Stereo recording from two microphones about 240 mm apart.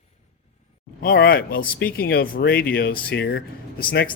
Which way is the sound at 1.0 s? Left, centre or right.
Left.